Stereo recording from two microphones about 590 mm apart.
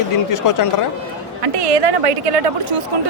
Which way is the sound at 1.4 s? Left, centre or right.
Right.